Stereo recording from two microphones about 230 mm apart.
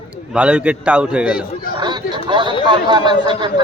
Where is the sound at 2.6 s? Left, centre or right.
Centre.